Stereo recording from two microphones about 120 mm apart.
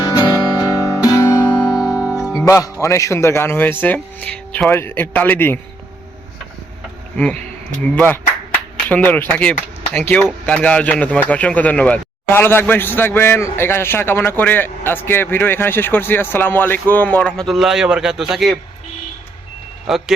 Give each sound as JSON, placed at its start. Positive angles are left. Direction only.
{"t": 0.1, "sound": "music", "side_deg": 30}
{"t": 1.7, "sound": "music", "side_deg": -5}
{"t": 2.8, "sound": "speech", "side_deg": 25}
{"t": 7.8, "sound": "speech", "side_deg": 10}
{"t": 19.9, "sound": "speech", "side_deg": -5}